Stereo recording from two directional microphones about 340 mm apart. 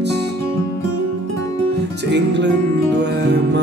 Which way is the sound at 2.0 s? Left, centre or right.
Right.